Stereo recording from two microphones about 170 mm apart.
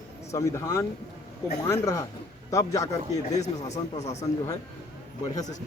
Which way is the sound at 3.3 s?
40° left (ahead or behind).